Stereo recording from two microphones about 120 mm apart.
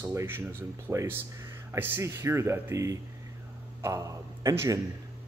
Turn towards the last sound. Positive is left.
turn(degrees=-25)  # may be behind; listen again after turning